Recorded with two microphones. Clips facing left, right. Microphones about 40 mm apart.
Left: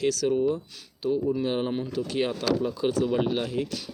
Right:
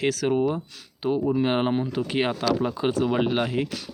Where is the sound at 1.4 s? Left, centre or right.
Right.